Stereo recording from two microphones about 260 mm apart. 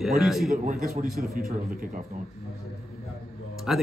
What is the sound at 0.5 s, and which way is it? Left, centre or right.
Speech, right.